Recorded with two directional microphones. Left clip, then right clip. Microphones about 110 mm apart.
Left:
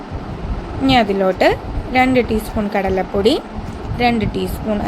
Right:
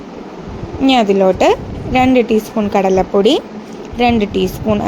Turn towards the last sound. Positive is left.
turn(degrees=-30)  # may be behind; listen again after turning